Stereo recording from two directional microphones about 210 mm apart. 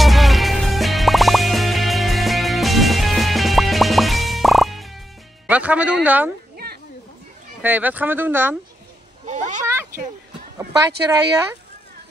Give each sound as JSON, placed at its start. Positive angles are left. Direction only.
{"t": 0.0, "sound": "music", "side_deg": 0}
{"t": 5.5, "sound": "speech", "side_deg": -5}
{"t": 6.5, "sound": "a sound", "side_deg": -45}
{"t": 7.6, "sound": "speech", "side_deg": -10}
{"t": 9.2, "sound": "speech", "side_deg": -35}
{"t": 9.7, "sound": "speech", "side_deg": -10}
{"t": 11.0, "sound": "speech", "side_deg": -15}